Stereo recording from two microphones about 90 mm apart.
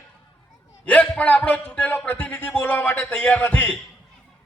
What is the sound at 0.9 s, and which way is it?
Speech, 15° left (ahead or behind).